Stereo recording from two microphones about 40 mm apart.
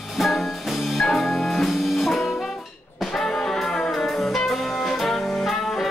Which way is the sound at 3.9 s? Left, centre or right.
Centre.